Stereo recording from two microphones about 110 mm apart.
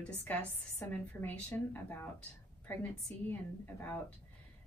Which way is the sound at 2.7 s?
15° left (ahead or behind).